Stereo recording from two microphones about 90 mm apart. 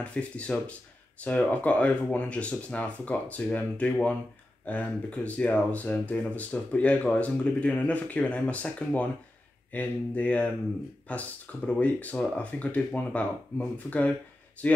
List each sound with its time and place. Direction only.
0.0 s speech: 15° left (ahead or behind)